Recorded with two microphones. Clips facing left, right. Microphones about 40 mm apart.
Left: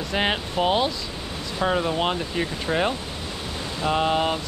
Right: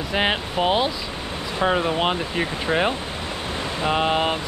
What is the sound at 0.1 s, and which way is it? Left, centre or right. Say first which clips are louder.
Speech: right 2 dB; centre.